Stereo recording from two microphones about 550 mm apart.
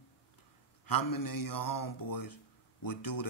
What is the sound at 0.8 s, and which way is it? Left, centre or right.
Speech, left.